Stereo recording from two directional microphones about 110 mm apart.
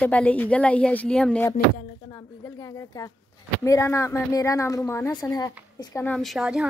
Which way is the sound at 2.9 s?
40° left (ahead or behind).